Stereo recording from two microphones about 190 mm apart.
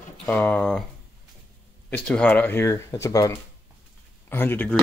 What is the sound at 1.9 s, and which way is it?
Speech, 5° left (ahead or behind).